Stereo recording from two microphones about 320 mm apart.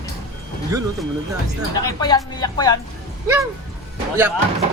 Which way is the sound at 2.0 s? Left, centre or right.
Centre.